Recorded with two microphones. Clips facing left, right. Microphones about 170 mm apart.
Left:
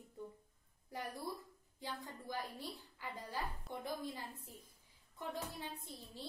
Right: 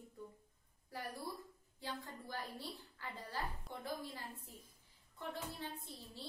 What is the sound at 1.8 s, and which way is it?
A woman's voice, 15° left (ahead or behind).